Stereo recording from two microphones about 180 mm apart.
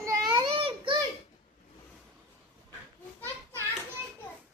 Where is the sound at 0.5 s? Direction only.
30° right (ahead or behind).